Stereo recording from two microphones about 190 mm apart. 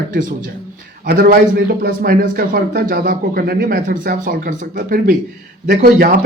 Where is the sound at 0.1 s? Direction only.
45° right (ahead or behind).